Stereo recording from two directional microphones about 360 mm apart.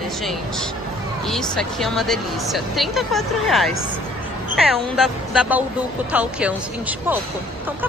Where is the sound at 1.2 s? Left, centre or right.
Centre.